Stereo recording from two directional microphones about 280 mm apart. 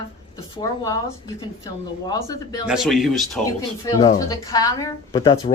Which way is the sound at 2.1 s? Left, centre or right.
Centre.